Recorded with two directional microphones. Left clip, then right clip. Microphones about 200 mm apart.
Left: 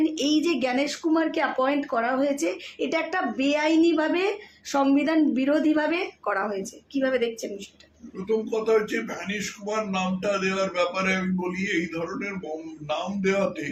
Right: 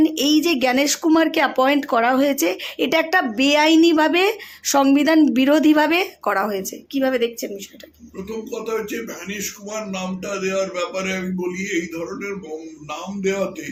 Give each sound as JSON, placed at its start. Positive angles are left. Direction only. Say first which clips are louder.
{"t": 0.0, "sound": "speech", "louder": "right 6 dB", "side_deg": -35}
{"t": 8.4, "sound": "speech", "louder": "left 1 dB", "side_deg": 5}